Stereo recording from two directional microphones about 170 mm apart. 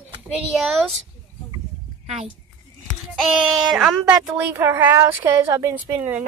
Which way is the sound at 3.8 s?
5° right (ahead or behind).